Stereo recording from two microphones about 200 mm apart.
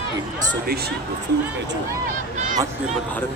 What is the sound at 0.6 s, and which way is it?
Speech, 50° right (ahead or behind).